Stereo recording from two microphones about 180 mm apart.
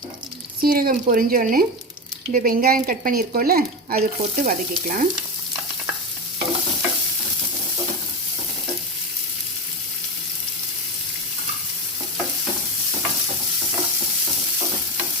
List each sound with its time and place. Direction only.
0.6 s speech: 55° right (ahead or behind)